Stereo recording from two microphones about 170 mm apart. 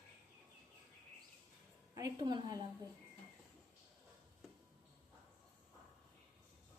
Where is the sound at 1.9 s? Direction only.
20° right (ahead or behind).